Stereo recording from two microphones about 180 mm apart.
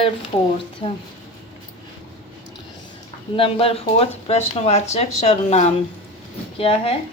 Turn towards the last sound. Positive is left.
turn(degrees=30)  # may be behind; listen again after turning